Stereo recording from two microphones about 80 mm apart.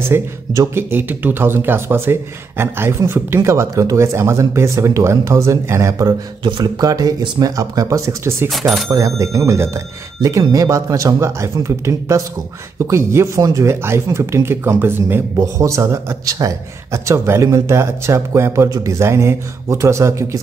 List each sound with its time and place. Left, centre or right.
0.1 s a man's voice: right
6.4 s speech: right
6.8 s speech: right
8.5 s speech: centre
8.9 s a man's voice: right
15.3 s a man's voice: right